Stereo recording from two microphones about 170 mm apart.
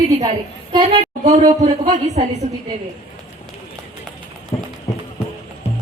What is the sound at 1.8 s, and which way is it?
Speech, 40° right (ahead or behind).